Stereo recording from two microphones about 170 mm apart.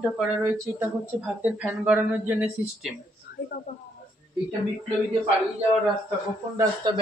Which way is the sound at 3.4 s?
55° left (ahead or behind).